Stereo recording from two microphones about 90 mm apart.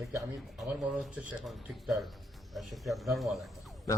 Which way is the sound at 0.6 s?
Centre (ahead or behind).